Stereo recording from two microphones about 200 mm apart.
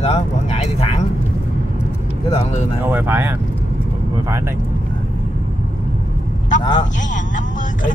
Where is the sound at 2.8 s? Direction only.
10° right (ahead or behind).